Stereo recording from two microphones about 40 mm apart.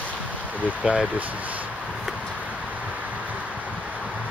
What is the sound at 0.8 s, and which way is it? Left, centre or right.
Speech, right.